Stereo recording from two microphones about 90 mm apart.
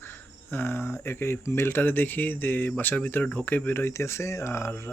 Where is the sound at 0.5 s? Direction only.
25° left (ahead or behind).